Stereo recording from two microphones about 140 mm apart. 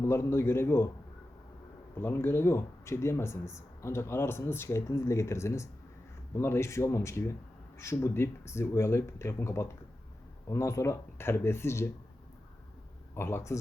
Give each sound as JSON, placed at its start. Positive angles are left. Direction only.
{"t": 0.0, "sound": "a man's voice", "side_deg": 20}
{"t": 2.0, "sound": "speech", "side_deg": 15}
{"t": 13.1, "sound": "a man's voice", "side_deg": 20}